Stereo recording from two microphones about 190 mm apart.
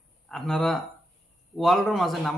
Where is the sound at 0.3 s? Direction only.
Centre (ahead or behind).